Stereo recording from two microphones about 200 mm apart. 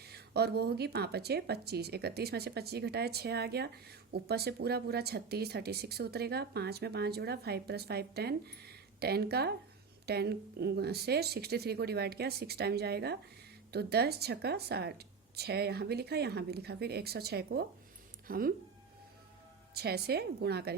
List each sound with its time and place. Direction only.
0.0 s a woman's voice: 55° right (ahead or behind)
19.7 s a woman's voice: 55° right (ahead or behind)